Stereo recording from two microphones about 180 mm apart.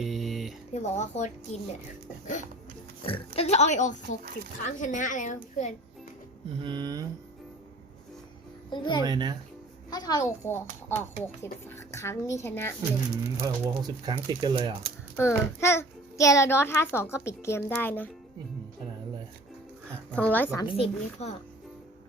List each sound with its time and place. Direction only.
0.0 s a sound: centre (ahead or behind)
0.7 s speech: 40° left (ahead or behind)
3.1 s a child's voice: 35° left (ahead or behind)
6.6 s speech: 25° right (ahead or behind)
8.7 s a child's voice: 25° left (ahead or behind)
9.0 s speech: 20° right (ahead or behind)
9.9 s a child's voice: 20° left (ahead or behind)
13.4 s speech: 20° right (ahead or behind)
15.1 s a child's voice: 15° left (ahead or behind)
20.1 s a child's voice: 10° left (ahead or behind)
20.6 s speech: 30° left (ahead or behind)